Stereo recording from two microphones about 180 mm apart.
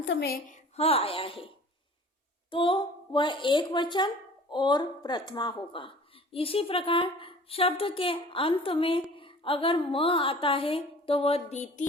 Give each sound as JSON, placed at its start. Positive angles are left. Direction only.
{"t": 0.0, "sound": "a woman's voice", "side_deg": 75}
{"t": 0.8, "sound": "a woman's voice", "side_deg": 35}